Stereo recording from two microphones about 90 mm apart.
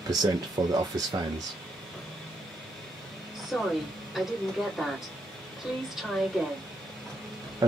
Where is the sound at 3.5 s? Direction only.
Centre (ahead or behind).